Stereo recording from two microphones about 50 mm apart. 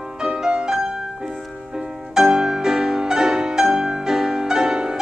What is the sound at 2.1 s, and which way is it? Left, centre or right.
Music, centre.